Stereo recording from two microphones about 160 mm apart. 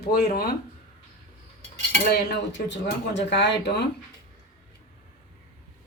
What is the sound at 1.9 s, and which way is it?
Speech, 90° left.